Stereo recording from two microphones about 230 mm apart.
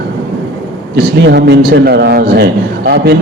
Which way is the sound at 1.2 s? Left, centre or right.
Right.